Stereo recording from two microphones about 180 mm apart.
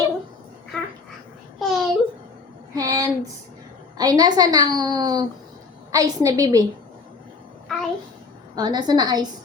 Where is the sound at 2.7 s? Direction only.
20° right (ahead or behind).